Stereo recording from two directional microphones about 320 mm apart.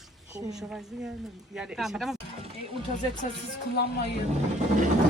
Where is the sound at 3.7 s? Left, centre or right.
Left.